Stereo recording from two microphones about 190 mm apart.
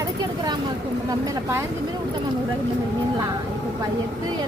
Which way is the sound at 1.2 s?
15° right (ahead or behind).